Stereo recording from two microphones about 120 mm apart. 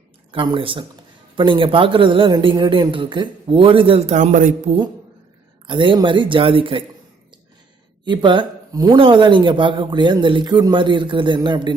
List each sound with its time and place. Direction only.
0.3 s speech: 45° right (ahead or behind); by 4.7 s 90° right
5.6 s speech: 45° right (ahead or behind)
8.0 s speech: 40° right (ahead or behind)